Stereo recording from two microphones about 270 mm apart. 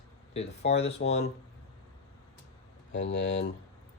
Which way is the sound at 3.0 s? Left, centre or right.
Left.